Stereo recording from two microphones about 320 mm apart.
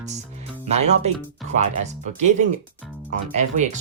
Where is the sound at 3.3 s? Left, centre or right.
Right.